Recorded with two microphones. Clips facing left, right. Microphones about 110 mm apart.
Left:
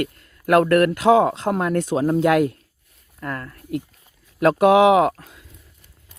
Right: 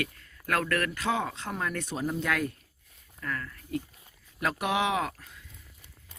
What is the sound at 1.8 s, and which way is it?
Speech, 90° left.